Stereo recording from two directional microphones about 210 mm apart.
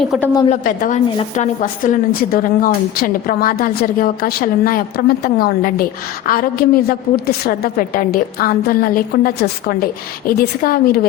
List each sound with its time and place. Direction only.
0.0 s a woman's voice: centre (ahead or behind)
0.5 s a woman's voice: 40° left (ahead or behind)
1.1 s a woman's voice: 25° left (ahead or behind)
1.8 s a woman's voice: 40° left (ahead or behind)